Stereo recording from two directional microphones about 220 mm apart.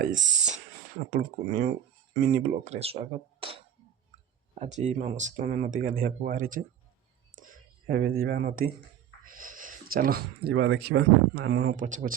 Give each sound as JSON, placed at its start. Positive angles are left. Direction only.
{"t": 0.4, "sound": "speech", "side_deg": -35}
{"t": 11.8, "sound": "speech", "side_deg": -35}